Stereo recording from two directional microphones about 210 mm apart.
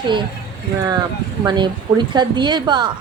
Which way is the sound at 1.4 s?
20° right (ahead or behind).